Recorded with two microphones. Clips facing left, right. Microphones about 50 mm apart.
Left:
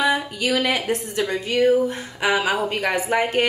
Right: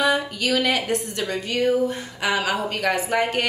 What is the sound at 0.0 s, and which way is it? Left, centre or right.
Speech, centre.